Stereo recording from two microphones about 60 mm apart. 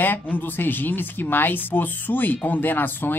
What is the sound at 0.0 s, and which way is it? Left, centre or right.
Speech, left.